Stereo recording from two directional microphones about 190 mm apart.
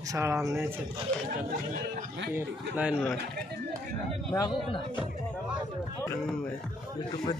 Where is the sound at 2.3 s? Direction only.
10° right (ahead or behind).